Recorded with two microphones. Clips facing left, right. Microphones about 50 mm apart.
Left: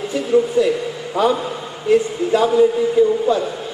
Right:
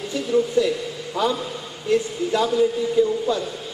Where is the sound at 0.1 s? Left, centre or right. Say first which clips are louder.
Left 4 dB; left.